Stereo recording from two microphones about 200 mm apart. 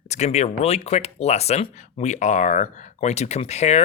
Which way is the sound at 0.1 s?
35° left (ahead or behind).